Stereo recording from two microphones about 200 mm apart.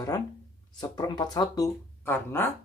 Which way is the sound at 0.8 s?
20° left (ahead or behind).